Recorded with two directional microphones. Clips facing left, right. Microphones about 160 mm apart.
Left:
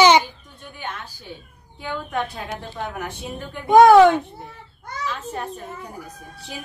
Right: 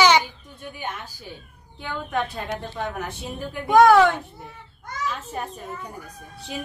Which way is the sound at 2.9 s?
Centre (ahead or behind).